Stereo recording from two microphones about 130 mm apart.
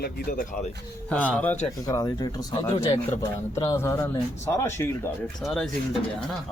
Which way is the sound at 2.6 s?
45° left (ahead or behind).